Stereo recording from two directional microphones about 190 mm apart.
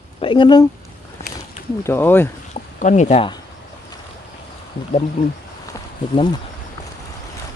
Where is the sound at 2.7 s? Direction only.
40° left (ahead or behind).